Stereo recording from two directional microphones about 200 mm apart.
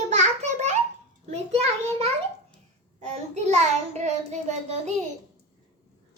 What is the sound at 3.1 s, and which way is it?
Child singing, 35° right (ahead or behind).